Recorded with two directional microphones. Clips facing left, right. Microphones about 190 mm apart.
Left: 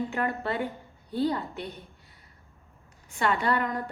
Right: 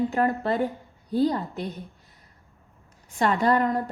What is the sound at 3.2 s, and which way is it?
Speech, 40° right (ahead or behind).